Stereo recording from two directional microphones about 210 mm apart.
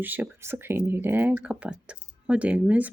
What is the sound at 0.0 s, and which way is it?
Speech, 10° right (ahead or behind).